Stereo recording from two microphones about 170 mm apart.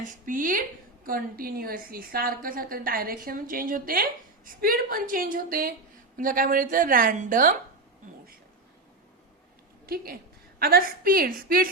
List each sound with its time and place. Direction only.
0.0 s a woman's voice: 50° right (ahead or behind)
9.8 s a woman's voice: 60° right (ahead or behind)